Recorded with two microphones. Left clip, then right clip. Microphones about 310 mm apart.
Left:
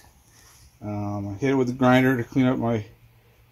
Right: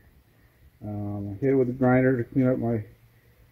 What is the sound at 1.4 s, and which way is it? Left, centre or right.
Speech, left.